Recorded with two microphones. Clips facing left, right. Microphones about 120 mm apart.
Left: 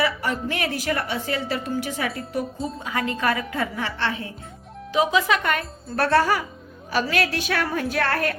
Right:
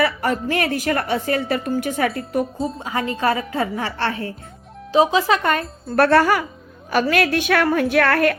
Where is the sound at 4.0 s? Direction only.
45° right (ahead or behind).